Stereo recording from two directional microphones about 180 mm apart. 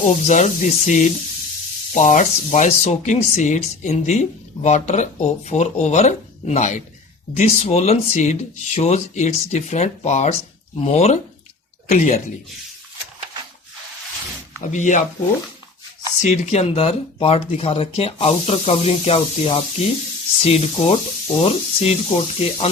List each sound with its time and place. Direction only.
0.0 s speech: 40° left (ahead or behind)
14.6 s speech: 45° left (ahead or behind)
16.2 s speech: 40° left (ahead or behind)